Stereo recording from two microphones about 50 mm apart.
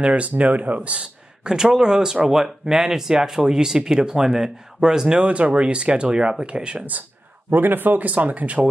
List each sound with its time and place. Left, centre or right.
0.0 s speech: right
7.0 s speech: right